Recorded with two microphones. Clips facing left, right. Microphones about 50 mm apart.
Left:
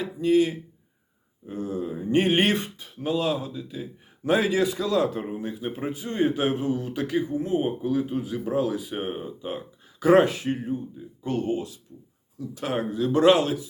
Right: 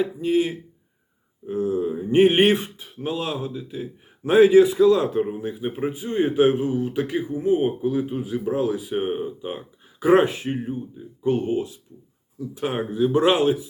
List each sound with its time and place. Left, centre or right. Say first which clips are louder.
0.0 s a man's voice: even; centre